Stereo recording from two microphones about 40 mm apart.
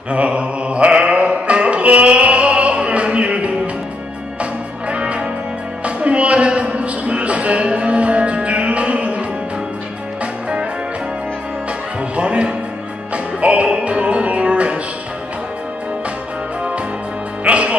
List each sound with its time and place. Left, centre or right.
0.1 s music: right
5.9 s a sound: right
12.2 s music: right
17.5 s music: right